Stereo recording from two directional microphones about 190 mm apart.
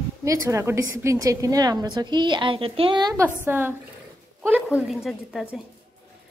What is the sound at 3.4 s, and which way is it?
A woman's voice, 10° right (ahead or behind).